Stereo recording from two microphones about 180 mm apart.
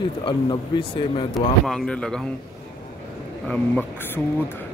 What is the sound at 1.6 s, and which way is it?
Speech, 5° left (ahead or behind).